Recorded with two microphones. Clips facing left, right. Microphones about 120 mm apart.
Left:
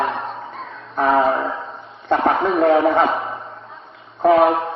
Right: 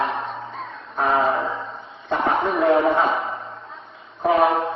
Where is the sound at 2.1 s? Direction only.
60° left (ahead or behind).